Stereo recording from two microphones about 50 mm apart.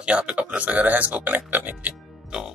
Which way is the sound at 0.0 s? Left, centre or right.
Right.